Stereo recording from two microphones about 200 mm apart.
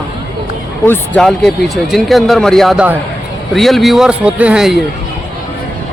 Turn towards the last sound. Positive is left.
turn(degrees=0)  # may be behind; listen again after turning